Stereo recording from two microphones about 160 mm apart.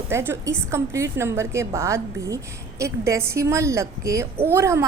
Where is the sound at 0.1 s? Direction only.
15° right (ahead or behind).